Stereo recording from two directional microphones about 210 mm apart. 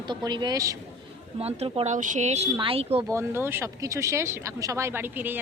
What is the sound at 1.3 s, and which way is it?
A woman's voice, 30° right (ahead or behind).